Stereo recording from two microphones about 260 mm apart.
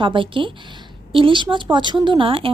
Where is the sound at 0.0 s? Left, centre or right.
Centre.